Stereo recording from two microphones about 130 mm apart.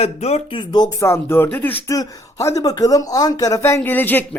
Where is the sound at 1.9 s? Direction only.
25° left (ahead or behind).